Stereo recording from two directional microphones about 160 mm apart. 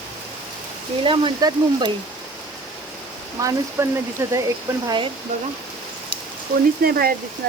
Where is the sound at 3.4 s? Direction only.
20° right (ahead or behind).